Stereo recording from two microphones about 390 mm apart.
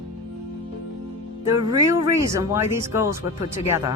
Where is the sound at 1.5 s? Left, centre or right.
Centre.